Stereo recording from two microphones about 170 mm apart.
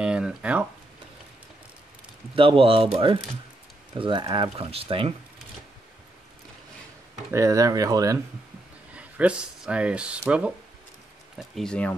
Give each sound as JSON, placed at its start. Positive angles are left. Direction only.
{"t": 0.0, "sound": "speech", "side_deg": -5}
{"t": 2.3, "sound": "speech", "side_deg": -30}
{"t": 4.0, "sound": "speech", "side_deg": -30}
{"t": 7.3, "sound": "speech", "side_deg": -20}
{"t": 8.9, "sound": "speech", "side_deg": -5}
{"t": 11.3, "sound": "speech", "side_deg": 0}